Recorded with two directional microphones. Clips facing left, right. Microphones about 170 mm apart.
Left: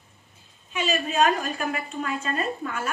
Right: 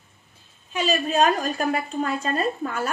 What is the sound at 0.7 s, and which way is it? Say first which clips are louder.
A woman's voice: right 2 dB; 35° right (ahead or behind).